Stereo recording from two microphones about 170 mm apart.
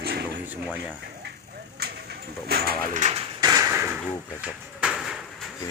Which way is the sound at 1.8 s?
70° right (ahead or behind).